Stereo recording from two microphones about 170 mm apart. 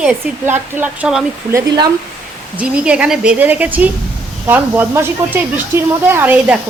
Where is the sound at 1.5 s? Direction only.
25° right (ahead or behind).